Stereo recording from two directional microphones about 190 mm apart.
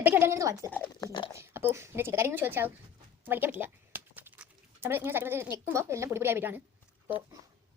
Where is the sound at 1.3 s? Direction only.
15° right (ahead or behind).